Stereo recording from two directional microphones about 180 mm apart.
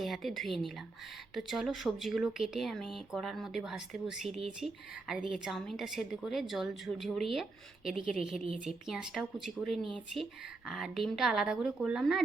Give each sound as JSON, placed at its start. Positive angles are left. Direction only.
{"t": 0.0, "sound": "speech", "side_deg": 0}